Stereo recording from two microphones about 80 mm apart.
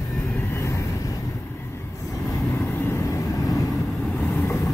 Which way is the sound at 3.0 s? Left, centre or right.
Left.